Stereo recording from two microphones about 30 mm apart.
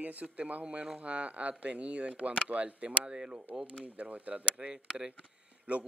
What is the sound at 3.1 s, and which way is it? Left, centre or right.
Speech, right.